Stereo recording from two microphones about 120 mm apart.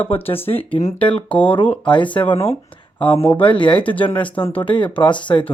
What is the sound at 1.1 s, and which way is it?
Speech, 10° left (ahead or behind).